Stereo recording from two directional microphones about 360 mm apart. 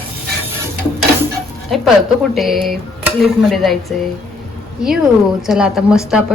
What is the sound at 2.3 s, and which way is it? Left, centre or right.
A woman's voice, centre.